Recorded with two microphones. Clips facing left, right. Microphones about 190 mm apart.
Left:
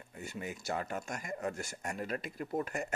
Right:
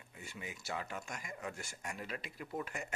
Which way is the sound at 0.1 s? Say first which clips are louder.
Left 7 dB; 45° left (ahead or behind).